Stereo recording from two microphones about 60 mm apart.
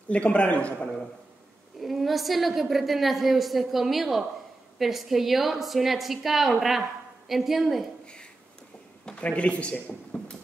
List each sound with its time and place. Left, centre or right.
0.1 s a man's voice: left
1.8 s a woman's voice: centre
9.0 s speech: left